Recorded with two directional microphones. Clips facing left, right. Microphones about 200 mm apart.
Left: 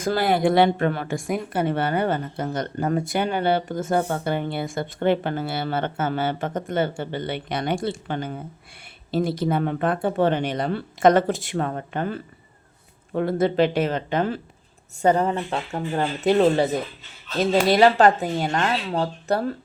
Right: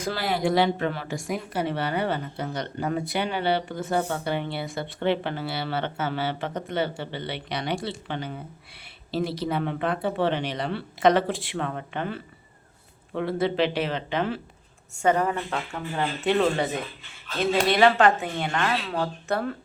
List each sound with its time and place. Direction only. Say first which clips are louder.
0.0 s speech: left 6 dB; 50° left (ahead or behind)
15.0 s speech: left 3 dB; 30° left (ahead or behind)
16.0 s speech: left 4 dB; 40° left (ahead or behind)